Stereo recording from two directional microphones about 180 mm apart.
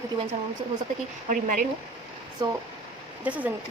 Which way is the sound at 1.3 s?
45° right (ahead or behind).